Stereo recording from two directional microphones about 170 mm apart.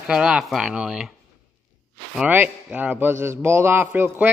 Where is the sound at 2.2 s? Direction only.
10° right (ahead or behind).